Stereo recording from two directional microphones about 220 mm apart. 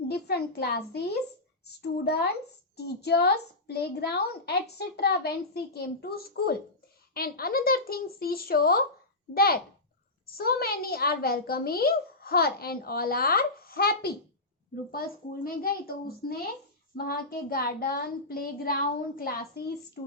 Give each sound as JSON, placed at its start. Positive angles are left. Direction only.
{"t": 0.1, "sound": "a child's voice", "side_deg": 45}